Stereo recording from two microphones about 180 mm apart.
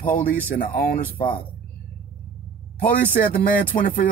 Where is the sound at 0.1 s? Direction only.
50° left (ahead or behind).